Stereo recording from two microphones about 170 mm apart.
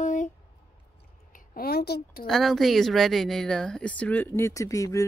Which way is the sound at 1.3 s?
60° left (ahead or behind).